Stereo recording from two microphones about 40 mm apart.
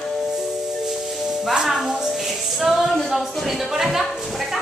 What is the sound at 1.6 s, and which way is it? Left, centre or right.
A woman's voice, centre.